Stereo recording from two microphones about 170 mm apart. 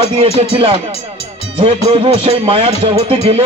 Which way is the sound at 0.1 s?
35° right (ahead or behind).